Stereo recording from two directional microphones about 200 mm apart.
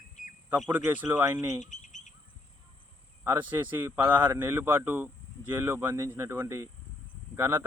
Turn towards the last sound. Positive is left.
turn(degrees=-10)  # may be behind; listen again after turning